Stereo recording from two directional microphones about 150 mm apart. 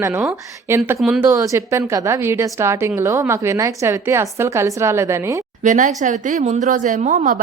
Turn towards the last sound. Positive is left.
turn(degrees=-55)  # may be behind; listen again after turning